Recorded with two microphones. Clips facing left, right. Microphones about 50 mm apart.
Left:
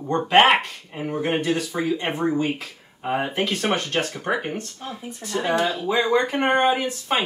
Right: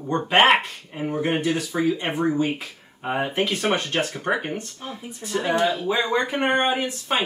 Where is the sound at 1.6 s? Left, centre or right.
Centre.